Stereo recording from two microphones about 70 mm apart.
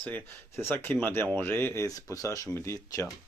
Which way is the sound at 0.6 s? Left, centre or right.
Left.